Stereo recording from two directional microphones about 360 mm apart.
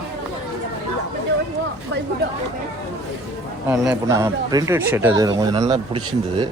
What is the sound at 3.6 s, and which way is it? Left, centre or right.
Speech, centre.